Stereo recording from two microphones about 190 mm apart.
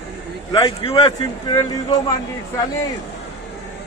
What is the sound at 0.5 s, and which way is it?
Speech, 25° left (ahead or behind).